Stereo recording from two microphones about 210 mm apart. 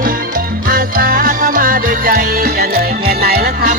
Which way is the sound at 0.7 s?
45° right (ahead or behind).